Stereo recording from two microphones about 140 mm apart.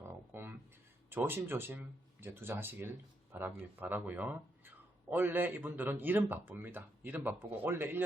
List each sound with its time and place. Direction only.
0.1 s music: 15° right (ahead or behind)
1.1 s speech: 15° right (ahead or behind)